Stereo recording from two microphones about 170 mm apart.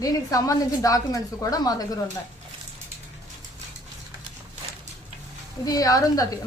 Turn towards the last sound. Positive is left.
turn(degrees=20)  # may be behind; listen again after turning